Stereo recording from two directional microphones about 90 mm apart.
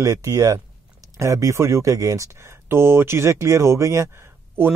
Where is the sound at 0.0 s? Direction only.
40° right (ahead or behind).